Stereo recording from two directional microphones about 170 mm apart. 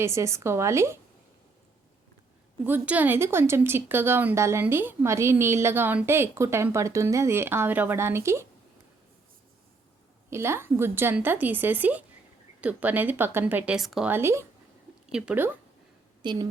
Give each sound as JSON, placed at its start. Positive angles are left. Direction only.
{"t": 0.0, "sound": "speech", "side_deg": -15}
{"t": 2.6, "sound": "speech", "side_deg": -10}
{"t": 10.2, "sound": "speech", "side_deg": -15}
{"t": 14.1, "sound": "speech", "side_deg": -15}
{"t": 16.2, "sound": "a woman's voice", "side_deg": -25}